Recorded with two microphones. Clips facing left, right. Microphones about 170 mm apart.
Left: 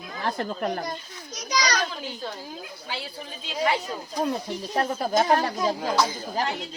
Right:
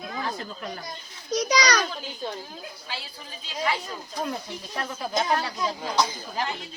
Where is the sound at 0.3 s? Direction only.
55° left (ahead or behind).